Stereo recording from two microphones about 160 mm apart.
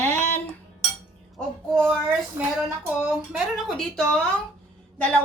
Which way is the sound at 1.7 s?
Centre (ahead or behind).